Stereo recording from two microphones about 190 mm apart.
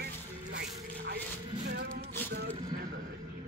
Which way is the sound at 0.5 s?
60° right (ahead or behind).